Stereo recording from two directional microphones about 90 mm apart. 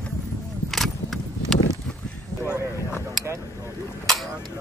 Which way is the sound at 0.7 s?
Centre (ahead or behind).